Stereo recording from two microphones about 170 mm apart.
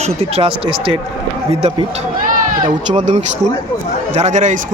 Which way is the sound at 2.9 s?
40° right (ahead or behind).